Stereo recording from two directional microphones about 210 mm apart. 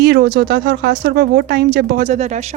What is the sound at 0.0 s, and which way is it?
Speech, 50° right (ahead or behind).